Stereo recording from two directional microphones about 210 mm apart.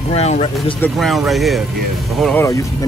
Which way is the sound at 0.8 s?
Centre (ahead or behind).